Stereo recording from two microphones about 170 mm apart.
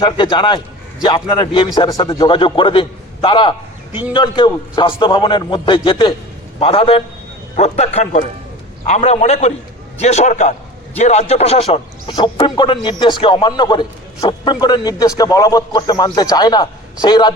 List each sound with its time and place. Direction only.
0.0 s a man's voice: 30° left (ahead or behind)